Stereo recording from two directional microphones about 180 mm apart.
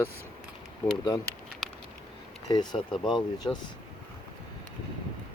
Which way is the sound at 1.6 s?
Centre (ahead or behind).